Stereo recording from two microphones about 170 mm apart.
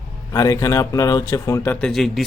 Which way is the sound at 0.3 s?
20° left (ahead or behind).